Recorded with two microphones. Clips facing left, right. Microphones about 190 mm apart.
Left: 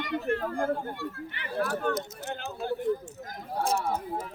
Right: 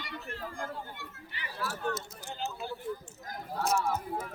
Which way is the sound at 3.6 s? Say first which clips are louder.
Left 2 dB; 30° left (ahead or behind).